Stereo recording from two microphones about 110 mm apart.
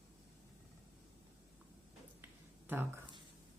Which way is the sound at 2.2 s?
20° right (ahead or behind).